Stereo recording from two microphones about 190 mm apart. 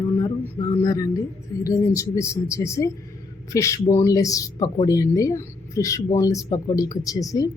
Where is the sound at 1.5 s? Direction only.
20° left (ahead or behind).